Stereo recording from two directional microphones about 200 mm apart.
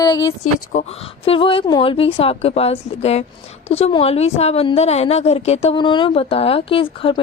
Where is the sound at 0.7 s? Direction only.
30° left (ahead or behind).